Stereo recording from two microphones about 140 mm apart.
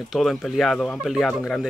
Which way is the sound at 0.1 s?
Centre (ahead or behind).